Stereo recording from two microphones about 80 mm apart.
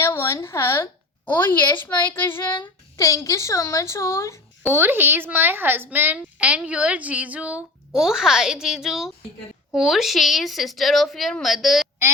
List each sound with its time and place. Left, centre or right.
0.0 s speech: left
1.2 s a child's voice: left
3.0 s a woman's voice: left
4.7 s a child's voice: right
6.1 s a woman's voice: centre
7.9 s a woman's voice: centre